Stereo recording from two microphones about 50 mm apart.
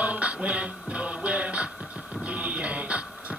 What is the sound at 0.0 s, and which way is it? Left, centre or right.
Music, right.